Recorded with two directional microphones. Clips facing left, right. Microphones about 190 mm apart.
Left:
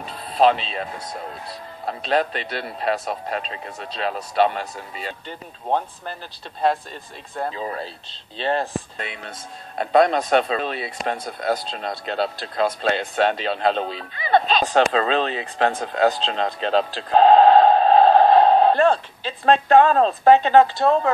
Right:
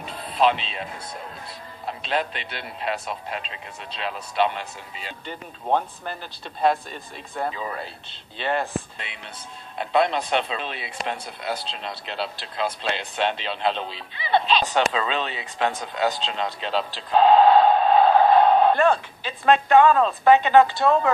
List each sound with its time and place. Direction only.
0.0 s speech: 35° left (ahead or behind)
1.9 s speech: 40° left (ahead or behind)
6.6 s speech: 30° left (ahead or behind)
8.4 s speech: 35° left (ahead or behind)